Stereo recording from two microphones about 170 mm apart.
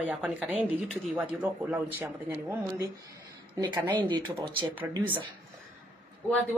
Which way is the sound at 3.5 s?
25° right (ahead or behind).